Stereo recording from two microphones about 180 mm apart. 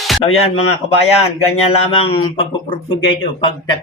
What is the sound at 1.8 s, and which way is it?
Speech, 30° left (ahead or behind).